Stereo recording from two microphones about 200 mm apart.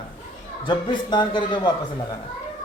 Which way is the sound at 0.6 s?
25° left (ahead or behind).